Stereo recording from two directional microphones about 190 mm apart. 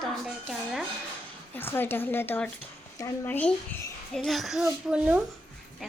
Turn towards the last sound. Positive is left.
turn(degrees=-5)  # may be behind; listen again after turning